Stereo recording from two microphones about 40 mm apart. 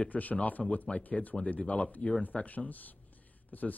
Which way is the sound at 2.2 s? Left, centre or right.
Left.